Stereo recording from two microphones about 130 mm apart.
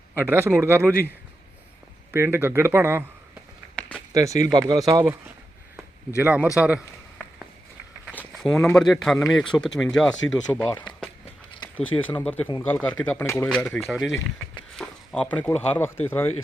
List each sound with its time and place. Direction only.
0.2 s speech: 20° right (ahead or behind)
2.1 s speech: 20° right (ahead or behind)
4.1 s speech: 25° right (ahead or behind)
6.2 s a man's voice: 10° right (ahead or behind)
8.4 s speech: 5° left (ahead or behind)
11.6 s a sound: 35° left (ahead or behind)
12.2 s speech: 10° left (ahead or behind)
13.6 s speech: 5° left (ahead or behind)